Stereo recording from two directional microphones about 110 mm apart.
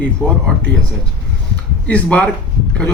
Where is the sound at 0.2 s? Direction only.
15° left (ahead or behind).